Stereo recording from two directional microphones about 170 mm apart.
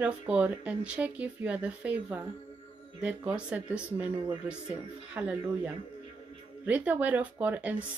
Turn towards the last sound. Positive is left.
turn(degrees=-10)  # may be behind; listen again after turning